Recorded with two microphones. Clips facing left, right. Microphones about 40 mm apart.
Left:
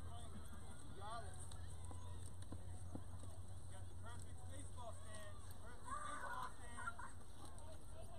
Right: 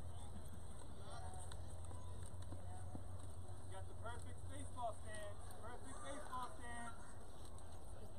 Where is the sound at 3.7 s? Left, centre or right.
Centre.